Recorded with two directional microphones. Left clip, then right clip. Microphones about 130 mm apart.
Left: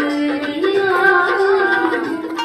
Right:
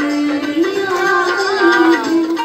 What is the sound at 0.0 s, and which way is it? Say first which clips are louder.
Music: right 2 dB; 90° left.